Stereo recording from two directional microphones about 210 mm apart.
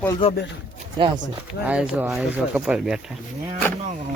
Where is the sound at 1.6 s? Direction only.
5° right (ahead or behind).